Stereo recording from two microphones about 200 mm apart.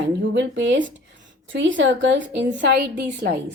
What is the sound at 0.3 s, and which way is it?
A woman's voice, 60° right (ahead or behind).